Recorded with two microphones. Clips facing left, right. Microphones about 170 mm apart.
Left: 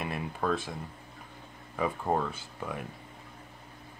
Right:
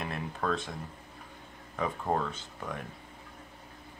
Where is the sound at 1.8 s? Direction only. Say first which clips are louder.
Left 2 dB; 10° left (ahead or behind).